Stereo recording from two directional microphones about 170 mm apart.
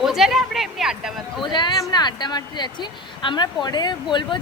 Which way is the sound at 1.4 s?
25° left (ahead or behind).